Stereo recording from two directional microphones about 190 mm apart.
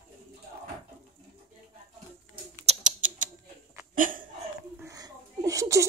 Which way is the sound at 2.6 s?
35° right (ahead or behind).